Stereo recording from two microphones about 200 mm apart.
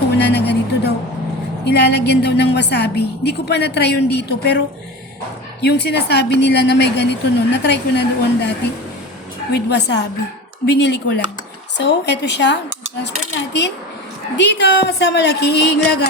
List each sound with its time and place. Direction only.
0.1 s music: 55° left (ahead or behind)
1.6 s a woman's voice: 55° left (ahead or behind)
5.6 s a woman's voice: 55° left (ahead or behind)
14.3 s a woman's voice: 60° left (ahead or behind)